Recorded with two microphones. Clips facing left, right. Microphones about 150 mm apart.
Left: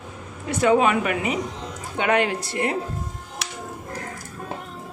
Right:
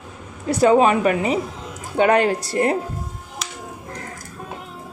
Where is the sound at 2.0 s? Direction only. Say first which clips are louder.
Right 5 dB; 40° right (ahead or behind).